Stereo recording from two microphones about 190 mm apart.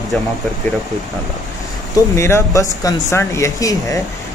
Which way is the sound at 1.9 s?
15° left (ahead or behind).